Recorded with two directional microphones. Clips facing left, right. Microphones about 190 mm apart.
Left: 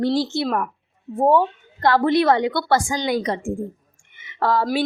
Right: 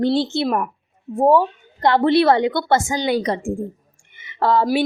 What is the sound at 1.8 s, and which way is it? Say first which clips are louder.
A woman's voice: right 2 dB; 20° right (ahead or behind).